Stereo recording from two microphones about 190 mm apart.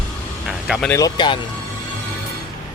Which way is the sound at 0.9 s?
20° left (ahead or behind).